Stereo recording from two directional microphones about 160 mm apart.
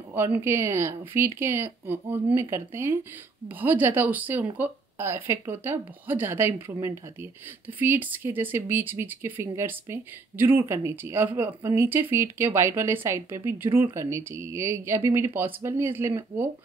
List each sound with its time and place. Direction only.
0.1 s speech: 15° right (ahead or behind)